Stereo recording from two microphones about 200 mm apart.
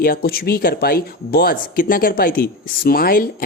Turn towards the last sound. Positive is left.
turn(degrees=45)  # may be behind; listen again after turning